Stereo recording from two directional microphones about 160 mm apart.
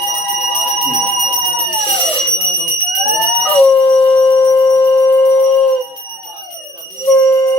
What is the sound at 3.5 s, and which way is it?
Howl, 10° left (ahead or behind).